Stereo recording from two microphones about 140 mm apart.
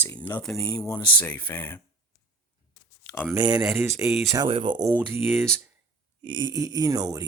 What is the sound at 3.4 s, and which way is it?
Speech, 30° right (ahead or behind).